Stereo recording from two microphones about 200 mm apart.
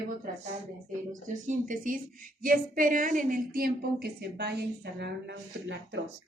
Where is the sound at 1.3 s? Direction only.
40° right (ahead or behind); by 6.0 s 60° right (ahead or behind).